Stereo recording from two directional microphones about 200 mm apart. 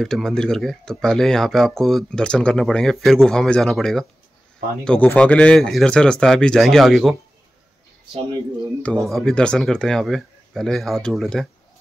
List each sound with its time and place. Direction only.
0.0 s speech: centre (ahead or behind)
9.0 s speech: centre (ahead or behind)